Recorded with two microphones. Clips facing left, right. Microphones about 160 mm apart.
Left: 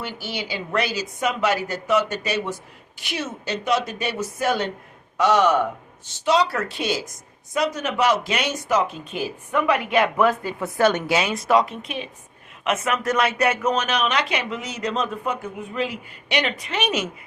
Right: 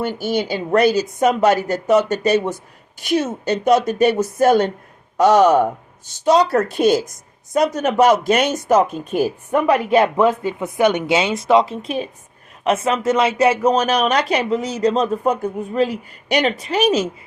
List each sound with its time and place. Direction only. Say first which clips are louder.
0.0 s a woman's voice: right 10 dB; 45° right (ahead or behind)